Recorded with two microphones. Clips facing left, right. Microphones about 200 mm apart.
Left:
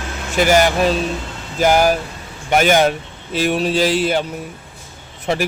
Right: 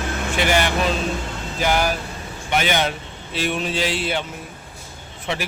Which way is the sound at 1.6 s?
45° left (ahead or behind).